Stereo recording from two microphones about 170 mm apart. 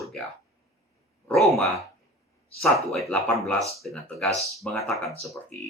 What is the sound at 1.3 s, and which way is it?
Speech, centre (ahead or behind).